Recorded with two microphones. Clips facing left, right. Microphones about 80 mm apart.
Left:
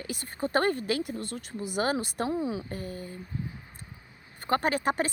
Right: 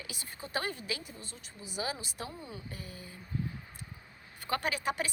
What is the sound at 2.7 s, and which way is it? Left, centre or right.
Speech, left.